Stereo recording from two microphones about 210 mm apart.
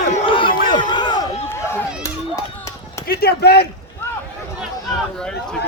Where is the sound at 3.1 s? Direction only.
50° left (ahead or behind).